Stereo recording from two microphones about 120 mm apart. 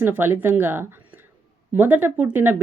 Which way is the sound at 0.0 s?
20° right (ahead or behind).